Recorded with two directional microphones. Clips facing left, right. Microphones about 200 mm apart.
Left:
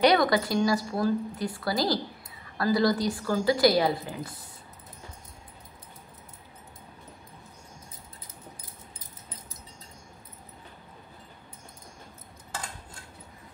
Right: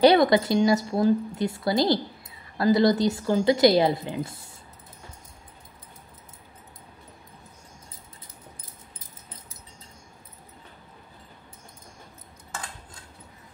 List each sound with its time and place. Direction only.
0.0 s a woman's voice: 25° right (ahead or behind)